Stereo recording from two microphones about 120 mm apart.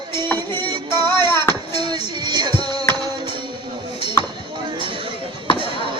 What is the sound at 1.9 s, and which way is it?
Music, 40° right (ahead or behind).